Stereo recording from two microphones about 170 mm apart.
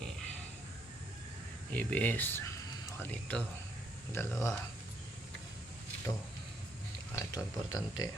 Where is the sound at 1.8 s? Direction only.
10° left (ahead or behind).